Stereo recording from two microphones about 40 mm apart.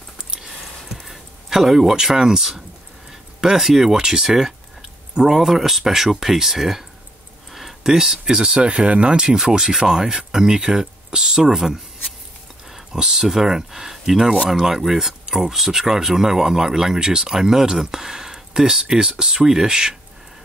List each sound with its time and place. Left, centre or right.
0.9 s speech: centre; by 9.2 s right
9.2 s speech: centre